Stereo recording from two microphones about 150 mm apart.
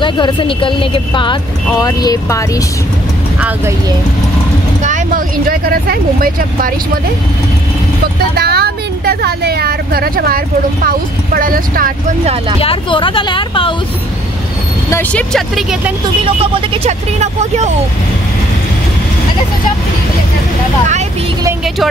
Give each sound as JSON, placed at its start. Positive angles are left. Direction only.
{"t": 0.0, "sound": "speech", "side_deg": 35}
{"t": 3.3, "sound": "speech", "side_deg": -10}
{"t": 4.8, "sound": "speech", "side_deg": -60}
{"t": 8.4, "sound": "speech", "side_deg": -90}
{"t": 12.5, "sound": "speech", "side_deg": 35}
{"t": 14.9, "sound": "speech", "side_deg": 15}
{"t": 15.3, "sound": "speech", "side_deg": 0}
{"t": 16.7, "sound": "speech", "side_deg": -45}